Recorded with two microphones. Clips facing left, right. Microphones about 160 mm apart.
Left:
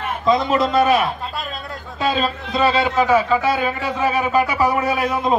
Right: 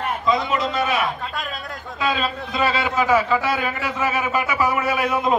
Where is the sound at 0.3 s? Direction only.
40° left (ahead or behind).